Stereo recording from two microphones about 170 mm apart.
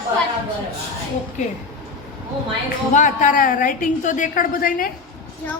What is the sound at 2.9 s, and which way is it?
A woman's voice, 45° left (ahead or behind).